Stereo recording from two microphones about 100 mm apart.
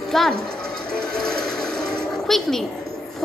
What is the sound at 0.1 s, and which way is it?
Speech, 5° left (ahead or behind).